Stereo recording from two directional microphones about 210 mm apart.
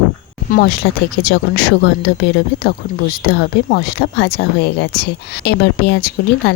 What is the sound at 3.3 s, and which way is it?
Speech, 50° left (ahead or behind).